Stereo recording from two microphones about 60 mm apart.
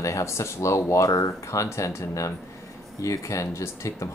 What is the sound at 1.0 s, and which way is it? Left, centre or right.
Speech, left.